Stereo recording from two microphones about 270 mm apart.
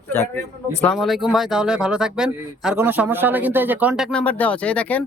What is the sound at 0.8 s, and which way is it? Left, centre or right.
Speech, centre.